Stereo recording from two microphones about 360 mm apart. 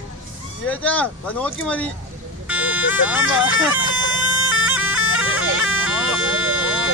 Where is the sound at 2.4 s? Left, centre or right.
Centre.